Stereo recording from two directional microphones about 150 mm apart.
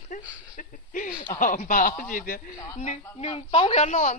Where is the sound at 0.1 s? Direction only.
60° left (ahead or behind).